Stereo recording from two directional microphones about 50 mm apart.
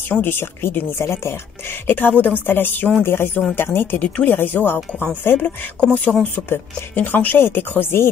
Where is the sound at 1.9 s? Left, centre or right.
Left.